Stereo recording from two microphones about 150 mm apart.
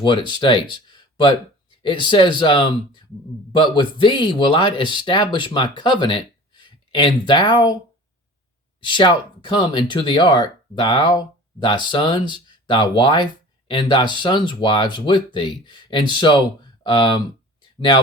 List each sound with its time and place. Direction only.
0.0 s speech: 30° left (ahead or behind)
8.8 s speech: 30° left (ahead or behind)